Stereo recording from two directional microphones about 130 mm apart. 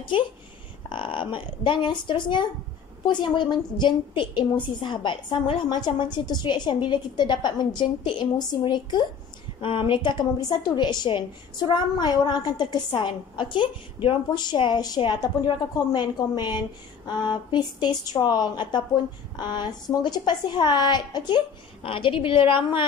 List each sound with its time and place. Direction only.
0.8 s a woman's voice: 40° left (ahead or behind)